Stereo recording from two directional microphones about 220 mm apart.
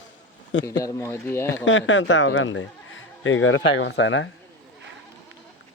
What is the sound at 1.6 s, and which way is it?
Speech, 60° left (ahead or behind).